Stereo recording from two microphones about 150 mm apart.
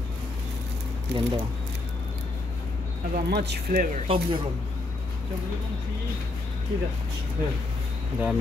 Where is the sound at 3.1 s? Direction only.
90° right.